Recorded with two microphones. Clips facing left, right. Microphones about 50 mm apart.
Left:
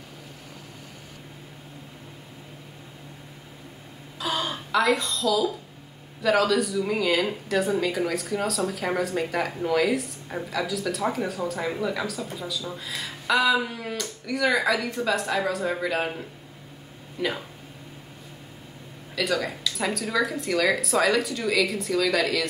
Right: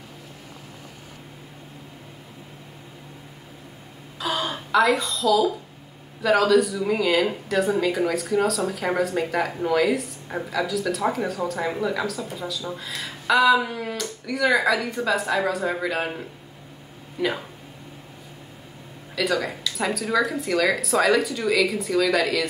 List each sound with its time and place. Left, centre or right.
4.2 s speech: centre
19.1 s speech: centre